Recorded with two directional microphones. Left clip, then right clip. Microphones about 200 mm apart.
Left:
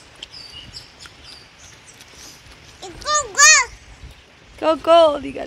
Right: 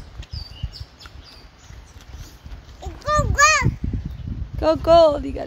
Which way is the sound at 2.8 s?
35° right (ahead or behind).